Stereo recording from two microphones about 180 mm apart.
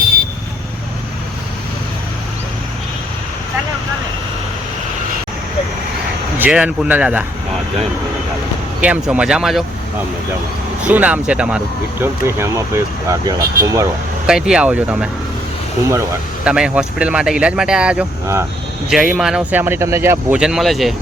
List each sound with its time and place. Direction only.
6.4 s speech: 5° right (ahead or behind)
8.8 s speech: 5° right (ahead or behind)
10.8 s speech: 10° right (ahead or behind)
14.3 s speech: 5° right (ahead or behind)
16.4 s speech: 5° right (ahead or behind)